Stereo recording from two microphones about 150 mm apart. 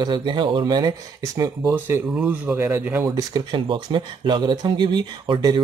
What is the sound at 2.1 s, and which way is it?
Speech, 10° right (ahead or behind).